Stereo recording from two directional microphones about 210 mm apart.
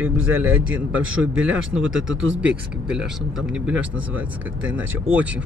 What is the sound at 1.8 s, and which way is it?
Speech, 65° right (ahead or behind).